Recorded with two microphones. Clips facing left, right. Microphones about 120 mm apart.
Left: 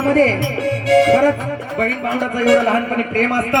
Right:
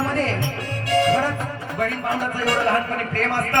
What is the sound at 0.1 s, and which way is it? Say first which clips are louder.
Music: left 9 dB; 90° left.